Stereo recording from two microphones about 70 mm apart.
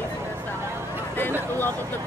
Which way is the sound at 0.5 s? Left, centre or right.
Right.